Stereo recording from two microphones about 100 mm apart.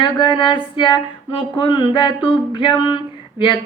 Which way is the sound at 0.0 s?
55° left (ahead or behind).